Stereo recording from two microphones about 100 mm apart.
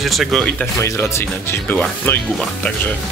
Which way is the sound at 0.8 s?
25° left (ahead or behind).